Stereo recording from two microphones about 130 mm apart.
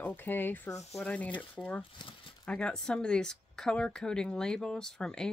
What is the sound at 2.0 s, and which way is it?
Speech, 35° left (ahead or behind).